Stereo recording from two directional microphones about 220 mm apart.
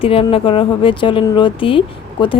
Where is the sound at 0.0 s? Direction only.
25° left (ahead or behind).